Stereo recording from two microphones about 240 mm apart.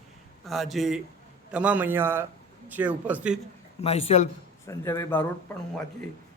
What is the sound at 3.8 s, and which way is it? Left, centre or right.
Speech, left.